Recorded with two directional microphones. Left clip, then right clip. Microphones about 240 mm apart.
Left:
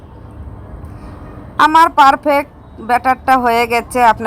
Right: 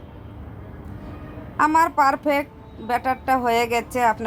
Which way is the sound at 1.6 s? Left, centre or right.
Centre.